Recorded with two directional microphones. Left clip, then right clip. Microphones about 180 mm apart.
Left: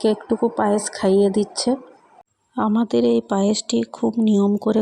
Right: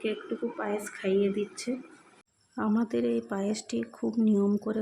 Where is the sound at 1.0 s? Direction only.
35° left (ahead or behind).